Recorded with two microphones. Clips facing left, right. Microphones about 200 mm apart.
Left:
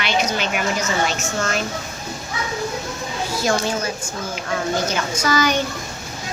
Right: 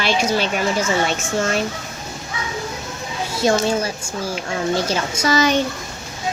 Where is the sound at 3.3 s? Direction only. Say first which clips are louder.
Right 4 dB; 25° right (ahead or behind).